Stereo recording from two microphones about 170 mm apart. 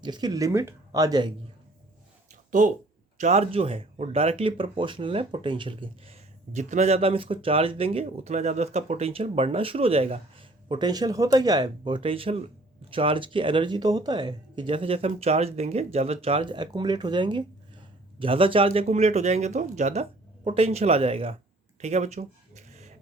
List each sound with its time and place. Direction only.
0.0 s speech: 25° right (ahead or behind)
2.5 s speech: 50° right (ahead or behind); by 6.1 s 30° right (ahead or behind)
6.5 s speech: 45° right (ahead or behind)
21.8 s a sound: 40° right (ahead or behind)